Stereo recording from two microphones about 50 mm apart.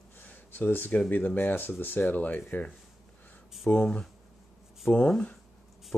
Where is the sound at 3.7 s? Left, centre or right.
Left.